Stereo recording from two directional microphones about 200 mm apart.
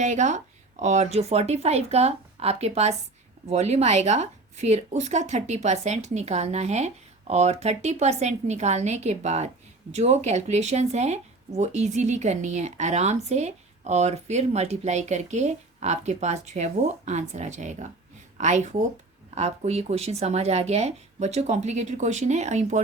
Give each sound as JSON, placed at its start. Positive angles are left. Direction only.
{"t": 0.0, "sound": "a woman's voice", "side_deg": -35}